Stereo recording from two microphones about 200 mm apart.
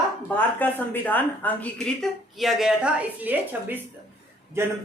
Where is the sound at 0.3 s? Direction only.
10° left (ahead or behind).